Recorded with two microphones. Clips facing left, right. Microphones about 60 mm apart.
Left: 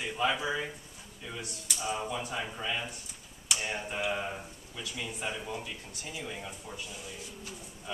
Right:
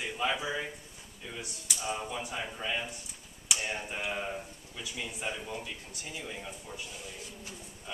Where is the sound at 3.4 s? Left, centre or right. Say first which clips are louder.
Left 1 dB; centre.